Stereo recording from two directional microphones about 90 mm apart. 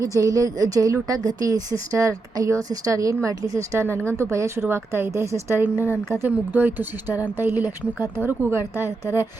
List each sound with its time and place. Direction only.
0.0 s a woman's voice: 40° right (ahead or behind)